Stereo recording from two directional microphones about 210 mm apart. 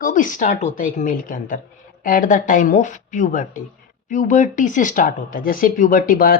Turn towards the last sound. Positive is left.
turn(degrees=40)  # may be behind; listen again after turning